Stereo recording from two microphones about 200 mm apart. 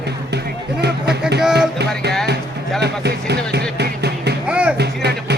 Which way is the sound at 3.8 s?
55° right (ahead or behind).